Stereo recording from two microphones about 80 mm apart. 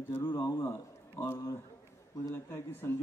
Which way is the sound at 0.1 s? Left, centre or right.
Left.